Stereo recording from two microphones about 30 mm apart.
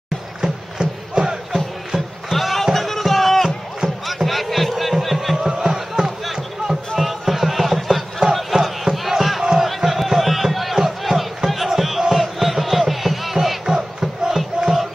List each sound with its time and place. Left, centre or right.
0.4 s music: right
2.3 s a sound: centre
4.0 s crowd: centre
4.9 s music: centre
5.6 s music: centre
7.0 s music: centre
8.2 s battle cry: right
8.6 s crowd: centre
12.1 s battle cry: centre
13.7 s crowd: centre